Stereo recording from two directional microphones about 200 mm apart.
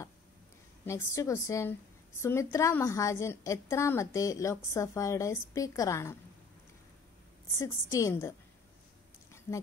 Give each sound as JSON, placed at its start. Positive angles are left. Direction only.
{"t": 0.8, "sound": "a woman's voice", "side_deg": 15}
{"t": 7.5, "sound": "a woman's voice", "side_deg": 15}